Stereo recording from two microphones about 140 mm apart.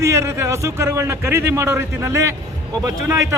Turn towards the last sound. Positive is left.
turn(degrees=-25)  # may be behind; listen again after turning